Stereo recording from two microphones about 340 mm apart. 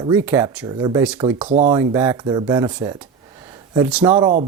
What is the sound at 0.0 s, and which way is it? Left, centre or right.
Speech, centre.